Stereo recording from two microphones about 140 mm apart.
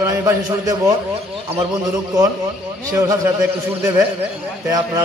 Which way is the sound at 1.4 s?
40° right (ahead or behind).